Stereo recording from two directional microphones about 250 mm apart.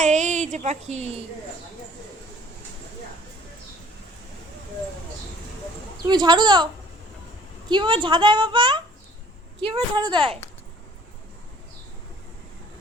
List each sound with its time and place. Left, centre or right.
0.0 s a sound: right
6.1 s speech: centre
7.7 s a woman's voice: centre